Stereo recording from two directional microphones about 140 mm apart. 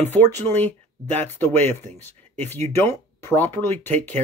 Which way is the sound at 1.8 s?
55° right (ahead or behind).